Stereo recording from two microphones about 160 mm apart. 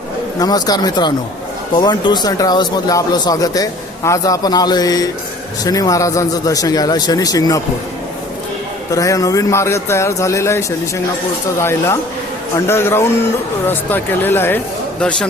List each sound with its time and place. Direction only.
0.3 s speech: 25° left (ahead or behind)
8.9 s speech: 20° left (ahead or behind)